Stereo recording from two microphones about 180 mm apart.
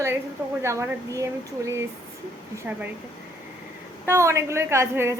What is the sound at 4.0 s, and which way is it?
A woman's voice, 15° right (ahead or behind).